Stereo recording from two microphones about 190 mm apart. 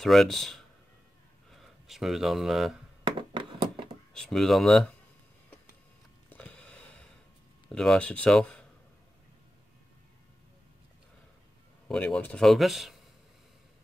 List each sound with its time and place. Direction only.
0.0 s speech: centre (ahead or behind)
3.0 s a sound: 25° right (ahead or behind)
4.1 s speech: 5° left (ahead or behind)
6.3 s a sound: 10° left (ahead or behind)
7.7 s speech: 5° left (ahead or behind)
11.9 s speech: 5° left (ahead or behind)